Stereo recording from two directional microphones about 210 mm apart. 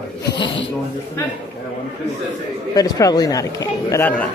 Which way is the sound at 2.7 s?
15° left (ahead or behind).